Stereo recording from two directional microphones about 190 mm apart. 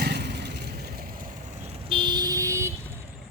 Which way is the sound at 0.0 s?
60° right (ahead or behind).